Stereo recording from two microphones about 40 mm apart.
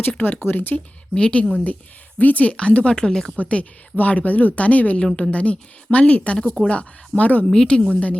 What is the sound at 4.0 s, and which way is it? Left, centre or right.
A woman's voice, left.